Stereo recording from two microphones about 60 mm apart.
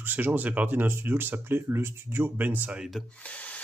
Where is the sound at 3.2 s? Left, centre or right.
Left.